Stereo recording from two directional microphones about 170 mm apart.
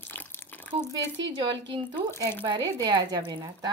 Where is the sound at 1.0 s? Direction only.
90° right.